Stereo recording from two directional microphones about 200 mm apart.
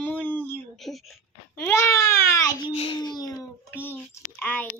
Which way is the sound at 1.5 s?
15° left (ahead or behind).